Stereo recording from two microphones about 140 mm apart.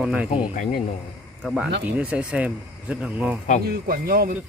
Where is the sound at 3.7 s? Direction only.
90° right.